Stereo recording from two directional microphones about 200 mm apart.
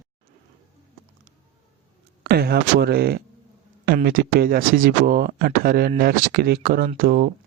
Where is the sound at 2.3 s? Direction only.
50° right (ahead or behind).